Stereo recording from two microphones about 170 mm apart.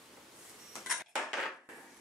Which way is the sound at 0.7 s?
Centre (ahead or behind).